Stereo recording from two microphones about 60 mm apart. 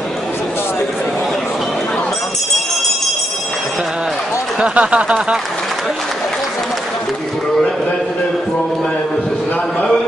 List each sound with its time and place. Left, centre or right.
4.6 s speech: centre